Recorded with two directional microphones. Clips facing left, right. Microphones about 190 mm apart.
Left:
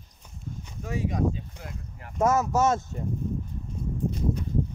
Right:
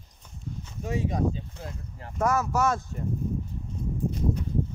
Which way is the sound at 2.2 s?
20° left (ahead or behind).